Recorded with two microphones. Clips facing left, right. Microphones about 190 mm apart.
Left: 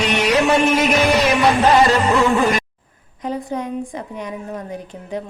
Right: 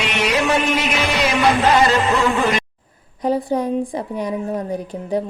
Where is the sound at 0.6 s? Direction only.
40° left (ahead or behind).